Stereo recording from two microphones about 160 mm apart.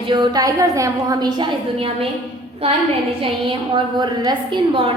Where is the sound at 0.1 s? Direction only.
30° right (ahead or behind).